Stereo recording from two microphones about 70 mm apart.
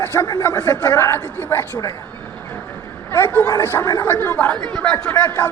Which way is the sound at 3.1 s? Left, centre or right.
Left.